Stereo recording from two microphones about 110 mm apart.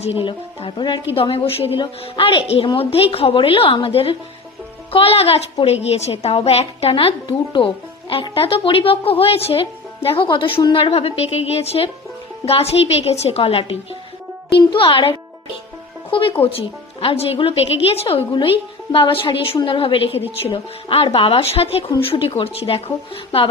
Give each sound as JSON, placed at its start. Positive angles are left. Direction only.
{"t": 0.3, "sound": "speech", "side_deg": 45}
{"t": 1.1, "sound": "a woman's voice", "side_deg": 55}
{"t": 18.9, "sound": "a woman's voice", "side_deg": 55}